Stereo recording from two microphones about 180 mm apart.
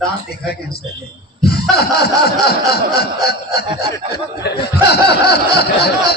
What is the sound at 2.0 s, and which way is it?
Snicker, 60° left (ahead or behind).